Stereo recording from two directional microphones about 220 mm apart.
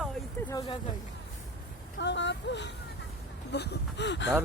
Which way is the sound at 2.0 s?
55° left (ahead or behind).